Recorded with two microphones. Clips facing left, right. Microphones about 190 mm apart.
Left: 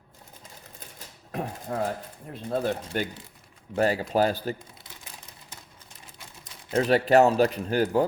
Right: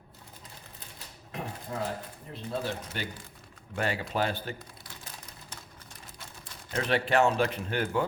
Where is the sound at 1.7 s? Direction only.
55° left (ahead or behind).